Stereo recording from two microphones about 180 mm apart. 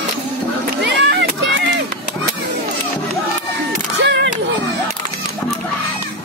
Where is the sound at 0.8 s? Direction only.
70° right (ahead or behind).